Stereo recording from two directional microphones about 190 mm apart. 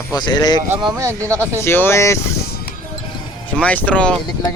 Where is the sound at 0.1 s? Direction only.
20° left (ahead or behind).